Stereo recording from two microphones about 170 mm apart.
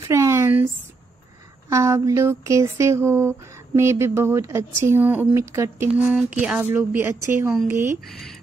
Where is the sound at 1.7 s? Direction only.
15° right (ahead or behind).